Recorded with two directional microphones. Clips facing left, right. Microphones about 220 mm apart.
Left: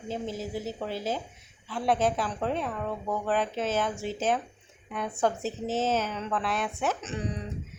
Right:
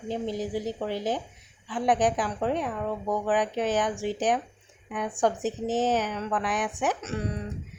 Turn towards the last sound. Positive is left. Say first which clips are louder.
# right 2 dB
turn(degrees=-10)  # may be behind; listen again after turning